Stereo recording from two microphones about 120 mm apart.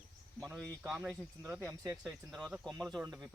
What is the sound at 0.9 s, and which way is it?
Speech, 20° right (ahead or behind).